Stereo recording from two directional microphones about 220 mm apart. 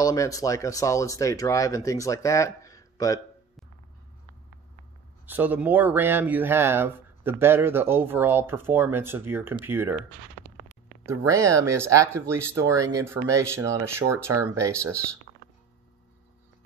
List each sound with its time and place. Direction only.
0.0 s speech: 15° left (ahead or behind)
5.2 s speech: 10° right (ahead or behind)